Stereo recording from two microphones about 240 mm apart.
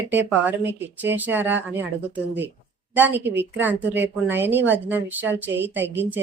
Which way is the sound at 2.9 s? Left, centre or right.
Centre.